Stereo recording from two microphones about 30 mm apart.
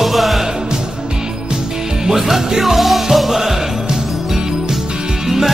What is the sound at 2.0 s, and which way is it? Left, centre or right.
Music, centre.